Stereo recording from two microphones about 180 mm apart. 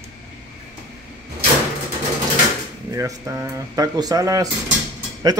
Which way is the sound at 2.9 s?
15° right (ahead or behind).